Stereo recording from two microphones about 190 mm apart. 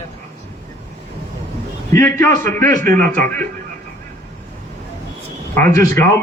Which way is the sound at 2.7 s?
45° right (ahead or behind).